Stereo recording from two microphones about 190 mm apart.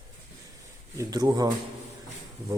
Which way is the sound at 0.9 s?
15° right (ahead or behind).